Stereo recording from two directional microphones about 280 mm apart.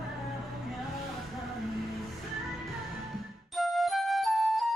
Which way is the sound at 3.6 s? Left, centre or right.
Centre.